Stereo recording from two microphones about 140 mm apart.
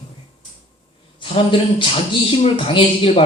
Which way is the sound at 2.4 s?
40° left (ahead or behind).